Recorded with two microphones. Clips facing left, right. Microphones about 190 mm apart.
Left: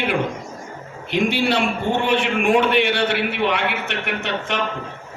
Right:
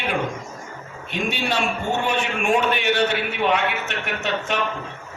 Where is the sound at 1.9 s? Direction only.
60° left (ahead or behind).